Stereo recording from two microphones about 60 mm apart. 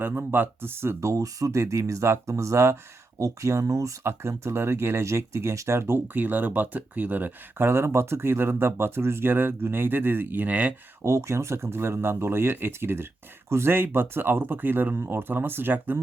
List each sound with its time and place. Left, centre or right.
0.0 s speech: right
1.0 s speech: right
1.5 s speech: right
4.0 s speech: right
6.1 s speech: right
7.7 s speech: right
11.0 s speech: right